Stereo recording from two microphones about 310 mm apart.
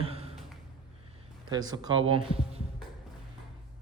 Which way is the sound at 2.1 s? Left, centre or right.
Centre.